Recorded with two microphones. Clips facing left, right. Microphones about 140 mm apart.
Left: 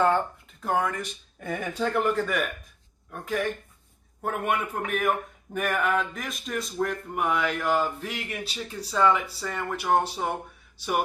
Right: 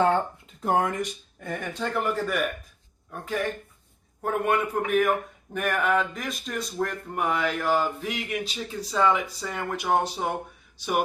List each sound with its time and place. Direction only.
0.6 s speech: 25° right (ahead or behind)
1.4 s speech: 5° left (ahead or behind); by 9.6 s 15° right (ahead or behind)
9.6 s speech: 5° right (ahead or behind)